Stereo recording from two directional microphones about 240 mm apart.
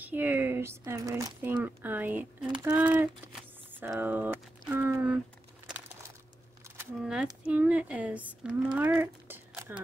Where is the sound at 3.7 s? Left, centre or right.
Centre.